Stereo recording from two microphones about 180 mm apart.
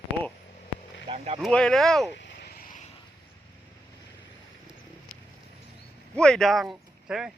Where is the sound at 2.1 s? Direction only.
70° left (ahead or behind); by 2.8 s 55° left (ahead or behind).